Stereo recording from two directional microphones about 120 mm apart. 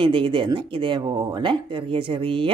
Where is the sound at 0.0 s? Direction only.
45° right (ahead or behind).